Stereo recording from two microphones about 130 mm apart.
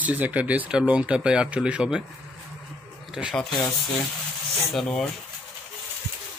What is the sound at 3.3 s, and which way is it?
Speech, 5° left (ahead or behind).